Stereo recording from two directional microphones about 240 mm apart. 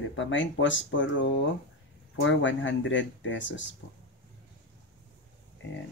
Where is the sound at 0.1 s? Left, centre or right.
Left.